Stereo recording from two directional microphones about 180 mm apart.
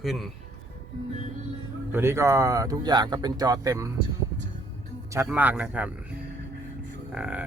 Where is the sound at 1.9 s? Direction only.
15° right (ahead or behind).